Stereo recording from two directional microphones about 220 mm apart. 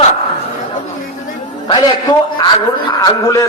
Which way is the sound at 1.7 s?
20° left (ahead or behind).